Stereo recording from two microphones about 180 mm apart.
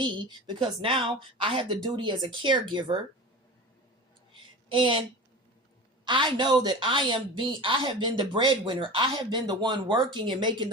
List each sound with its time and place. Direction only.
0.0 s a woman's voice: 25° right (ahead or behind)
4.3 s a sound: 25° right (ahead or behind)
6.1 s a woman's voice: 25° right (ahead or behind)